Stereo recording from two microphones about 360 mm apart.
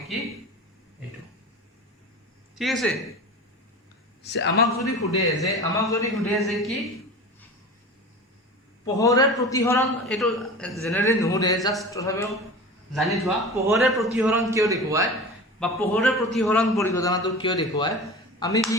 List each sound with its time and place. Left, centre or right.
2.6 s a man's voice: centre
4.2 s speech: left
4.6 s a man's voice: centre
8.8 s a man's voice: centre